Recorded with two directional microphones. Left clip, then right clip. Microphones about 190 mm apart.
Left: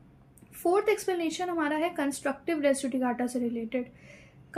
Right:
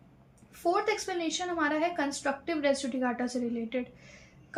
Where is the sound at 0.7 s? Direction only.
40° left (ahead or behind).